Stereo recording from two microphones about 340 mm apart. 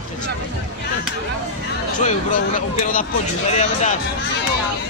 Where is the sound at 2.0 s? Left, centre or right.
Left.